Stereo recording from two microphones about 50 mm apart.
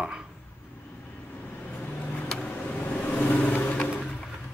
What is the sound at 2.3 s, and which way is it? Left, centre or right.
Vehicle, left.